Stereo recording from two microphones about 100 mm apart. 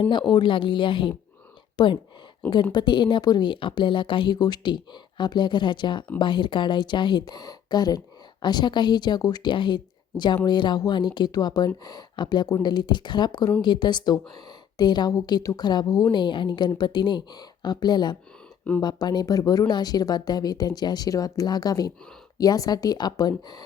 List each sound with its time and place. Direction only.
0.0 s a woman's voice: 50° left (ahead or behind)
4.4 s speech: 45° left (ahead or behind)
16.1 s speech: 50° left (ahead or behind)